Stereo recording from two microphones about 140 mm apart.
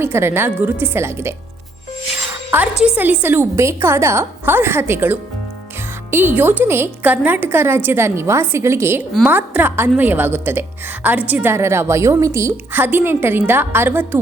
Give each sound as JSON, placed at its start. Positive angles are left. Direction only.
{"t": 0.0, "sound": "a woman's voice", "side_deg": -15}
{"t": 2.8, "sound": "a woman's voice", "side_deg": -10}